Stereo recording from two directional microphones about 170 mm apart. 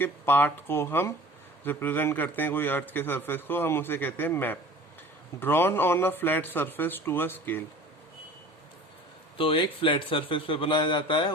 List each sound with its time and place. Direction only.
0.0 s a man's voice: 10° left (ahead or behind)
9.4 s speech: 30° left (ahead or behind)